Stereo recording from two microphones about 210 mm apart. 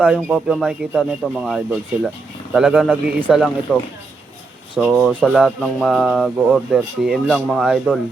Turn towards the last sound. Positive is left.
turn(degrees=-5)  # may be behind; listen again after turning